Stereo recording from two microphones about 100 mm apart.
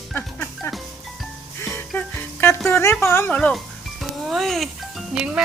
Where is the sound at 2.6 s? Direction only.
25° left (ahead or behind).